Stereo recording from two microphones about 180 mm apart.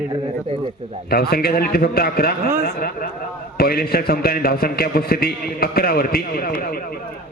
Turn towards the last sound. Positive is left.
turn(degrees=50)  # may be behind; listen again after turning